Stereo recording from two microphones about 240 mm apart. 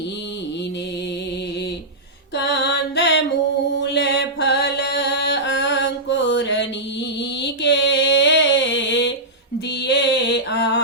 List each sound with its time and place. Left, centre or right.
2.3 s music: left
3.8 s mantra: left